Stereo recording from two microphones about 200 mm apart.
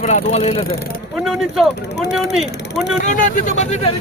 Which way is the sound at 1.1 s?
Centre (ahead or behind).